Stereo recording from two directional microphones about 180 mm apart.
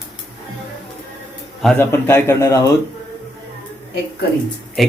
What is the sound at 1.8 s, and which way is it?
Speech, 15° left (ahead or behind).